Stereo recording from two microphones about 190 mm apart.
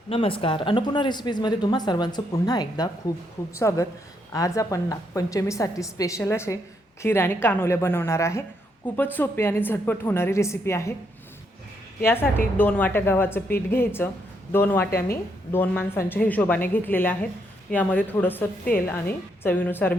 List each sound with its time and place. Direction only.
0.1 s a woman's voice: 30° left (ahead or behind)
12.0 s a woman's voice: 10° left (ahead or behind)